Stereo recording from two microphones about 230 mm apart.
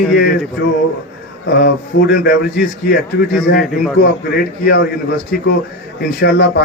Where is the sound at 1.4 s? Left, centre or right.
Left.